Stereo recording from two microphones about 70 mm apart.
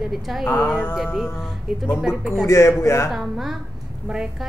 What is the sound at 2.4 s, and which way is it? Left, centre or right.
Speech, left.